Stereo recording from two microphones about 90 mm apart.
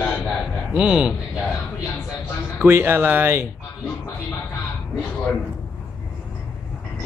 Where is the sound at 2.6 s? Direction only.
20° right (ahead or behind).